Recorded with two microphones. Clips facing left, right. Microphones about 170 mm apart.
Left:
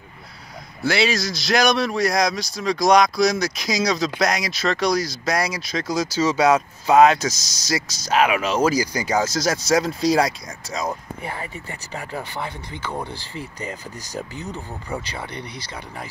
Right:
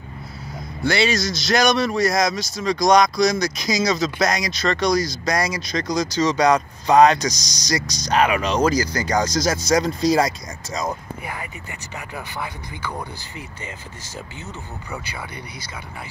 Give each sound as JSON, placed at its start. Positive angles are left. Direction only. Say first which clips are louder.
{"t": 0.8, "sound": "speech", "louder": "right 1 dB", "side_deg": 0}
{"t": 11.9, "sound": "speech", "louder": "left 3 dB", "side_deg": 30}